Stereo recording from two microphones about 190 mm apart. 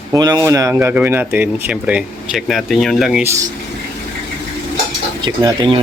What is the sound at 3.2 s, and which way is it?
Speech, 15° right (ahead or behind).